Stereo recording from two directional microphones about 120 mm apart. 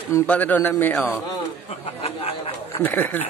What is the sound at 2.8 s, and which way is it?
Speech, 15° left (ahead or behind).